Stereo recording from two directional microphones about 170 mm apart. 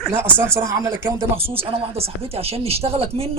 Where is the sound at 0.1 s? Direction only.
15° right (ahead or behind).